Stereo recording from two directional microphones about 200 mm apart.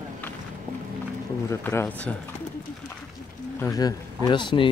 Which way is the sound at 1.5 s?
15° left (ahead or behind).